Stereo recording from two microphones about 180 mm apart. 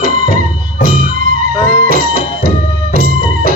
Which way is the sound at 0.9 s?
50° right (ahead or behind).